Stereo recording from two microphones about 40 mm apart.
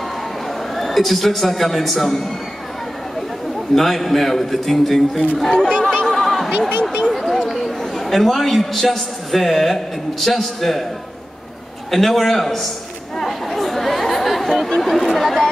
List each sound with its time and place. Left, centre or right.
0.7 s a man's voice: centre
3.7 s a man's voice: centre
5.7 s a sound: centre
7.2 s chatter: centre
8.7 s a man's voice: centre
11.9 s a man's voice: centre
13.2 s chatter: centre